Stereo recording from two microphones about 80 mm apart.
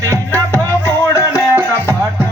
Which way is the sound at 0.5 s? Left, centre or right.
Left.